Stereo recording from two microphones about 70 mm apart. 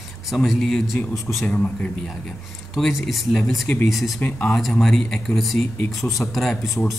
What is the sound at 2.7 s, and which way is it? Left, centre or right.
Speech, centre.